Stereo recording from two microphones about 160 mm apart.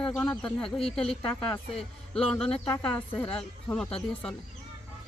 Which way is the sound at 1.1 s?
35° left (ahead or behind).